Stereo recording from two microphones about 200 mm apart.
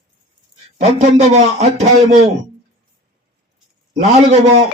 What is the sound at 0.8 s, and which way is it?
Speech, 35° right (ahead or behind).